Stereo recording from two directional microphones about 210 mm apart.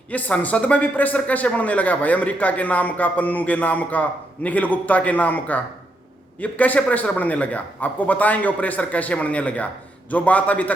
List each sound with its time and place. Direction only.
0.1 s a man's voice: 5° left (ahead or behind)